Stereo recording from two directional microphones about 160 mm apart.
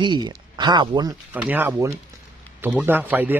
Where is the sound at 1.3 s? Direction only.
10° right (ahead or behind).